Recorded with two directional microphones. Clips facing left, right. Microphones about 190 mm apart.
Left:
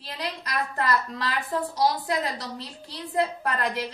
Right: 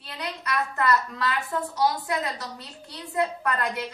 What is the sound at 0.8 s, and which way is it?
A woman's voice, 30° left (ahead or behind).